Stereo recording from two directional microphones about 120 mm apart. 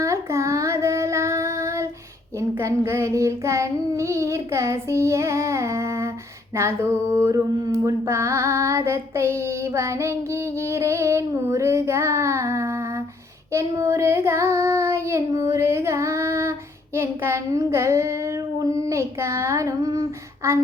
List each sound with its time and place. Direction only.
0.0 s child singing: 25° right (ahead or behind)